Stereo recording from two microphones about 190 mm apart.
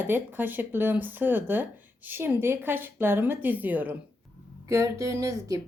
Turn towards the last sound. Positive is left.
turn(degrees=-15)  # may be behind; listen again after turning